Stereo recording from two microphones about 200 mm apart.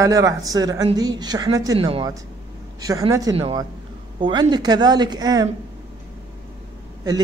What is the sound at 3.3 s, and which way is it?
Speech, 30° right (ahead or behind).